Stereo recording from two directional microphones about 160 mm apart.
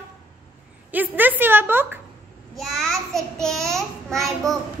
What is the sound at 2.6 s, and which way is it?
A child's voice, centre (ahead or behind).